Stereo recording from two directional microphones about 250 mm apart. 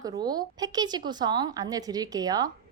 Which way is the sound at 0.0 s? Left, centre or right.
Centre.